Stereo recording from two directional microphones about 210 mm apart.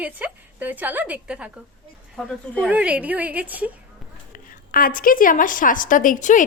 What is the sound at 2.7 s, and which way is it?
A woman's voice, 5° right (ahead or behind).